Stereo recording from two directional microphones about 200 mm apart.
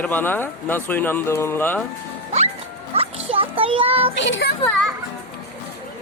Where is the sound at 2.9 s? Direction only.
30° right (ahead or behind).